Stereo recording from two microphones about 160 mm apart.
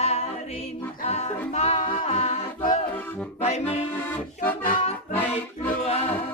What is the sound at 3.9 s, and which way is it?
Music, 15° left (ahead or behind).